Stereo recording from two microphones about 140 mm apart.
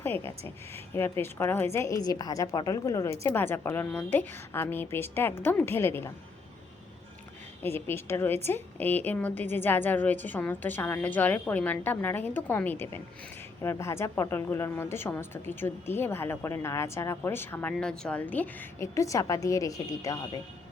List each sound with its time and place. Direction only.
0.0 s a woman's voice: 15° left (ahead or behind)
7.6 s a woman's voice: 15° left (ahead or behind)